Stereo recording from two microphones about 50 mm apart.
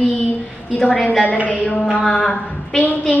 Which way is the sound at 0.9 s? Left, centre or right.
Left.